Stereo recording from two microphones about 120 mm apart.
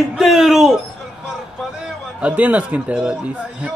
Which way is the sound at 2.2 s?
10° right (ahead or behind).